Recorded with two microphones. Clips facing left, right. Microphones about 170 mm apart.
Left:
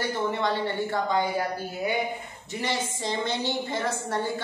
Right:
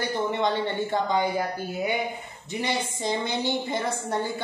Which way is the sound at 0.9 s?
20° right (ahead or behind).